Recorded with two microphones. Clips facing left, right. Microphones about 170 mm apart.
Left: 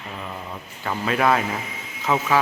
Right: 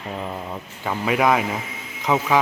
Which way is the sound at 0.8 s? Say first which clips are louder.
Right 1 dB; 10° right (ahead or behind).